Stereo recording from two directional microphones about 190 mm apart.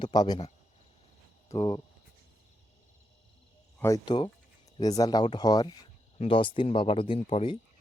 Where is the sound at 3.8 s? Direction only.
20° left (ahead or behind).